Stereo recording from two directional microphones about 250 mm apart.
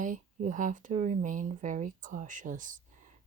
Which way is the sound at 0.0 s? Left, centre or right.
Right.